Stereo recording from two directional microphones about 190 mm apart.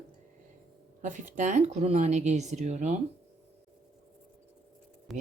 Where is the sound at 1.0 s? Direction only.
40° right (ahead or behind).